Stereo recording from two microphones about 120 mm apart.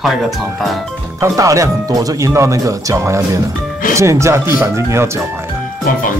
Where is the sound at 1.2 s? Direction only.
25° right (ahead or behind).